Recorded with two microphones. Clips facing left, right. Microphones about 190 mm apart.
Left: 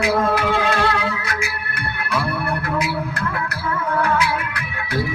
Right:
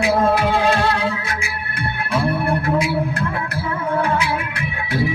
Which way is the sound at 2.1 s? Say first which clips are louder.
Right 4 dB; 25° right (ahead or behind).